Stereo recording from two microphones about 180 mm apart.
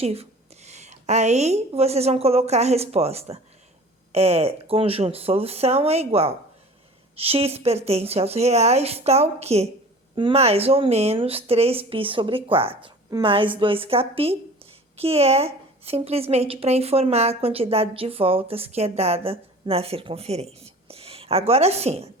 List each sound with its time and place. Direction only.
0.0 s a woman's voice: 35° right (ahead or behind)